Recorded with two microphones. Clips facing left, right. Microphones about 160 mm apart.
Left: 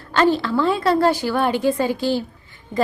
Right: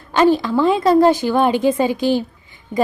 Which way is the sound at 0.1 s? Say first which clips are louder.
Right 3 dB; 15° right (ahead or behind).